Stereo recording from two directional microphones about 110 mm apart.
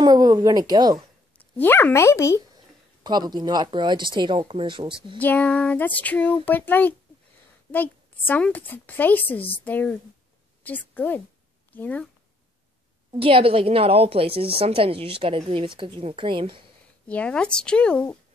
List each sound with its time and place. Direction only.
0.0 s speech: 35° right (ahead or behind)
1.4 s speech: 20° left (ahead or behind)
2.5 s speech: 40° right (ahead or behind)
5.2 s a woman's voice: 15° left (ahead or behind)
13.2 s a woman's voice: 60° right (ahead or behind)
17.1 s a woman's voice: 10° left (ahead or behind)